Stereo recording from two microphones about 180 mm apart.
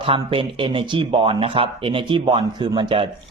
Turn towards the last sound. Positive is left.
turn(degrees=-25)  # may be behind; listen again after turning